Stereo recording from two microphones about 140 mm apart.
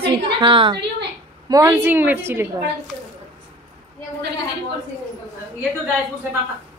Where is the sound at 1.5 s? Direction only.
20° right (ahead or behind).